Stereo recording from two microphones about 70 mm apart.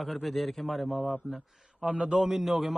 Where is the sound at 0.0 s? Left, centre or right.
Centre.